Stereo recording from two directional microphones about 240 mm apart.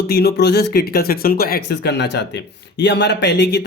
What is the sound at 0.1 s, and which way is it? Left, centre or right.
Speech, left.